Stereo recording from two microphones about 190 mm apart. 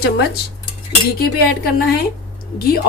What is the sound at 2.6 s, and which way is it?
Speech, 50° left (ahead or behind).